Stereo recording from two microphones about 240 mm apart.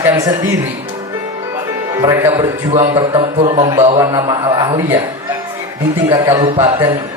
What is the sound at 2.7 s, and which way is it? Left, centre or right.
A man's voice, right.